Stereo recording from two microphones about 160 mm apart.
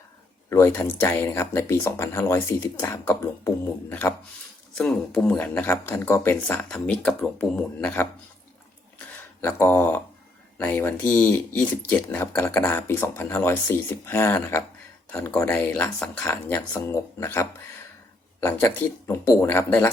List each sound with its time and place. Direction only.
0.5 s speech: 15° left (ahead or behind)
9.0 s a sound: 10° left (ahead or behind)
10.6 s speech: 10° left (ahead or behind)